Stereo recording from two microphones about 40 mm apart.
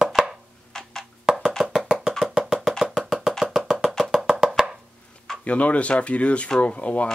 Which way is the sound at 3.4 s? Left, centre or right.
Centre.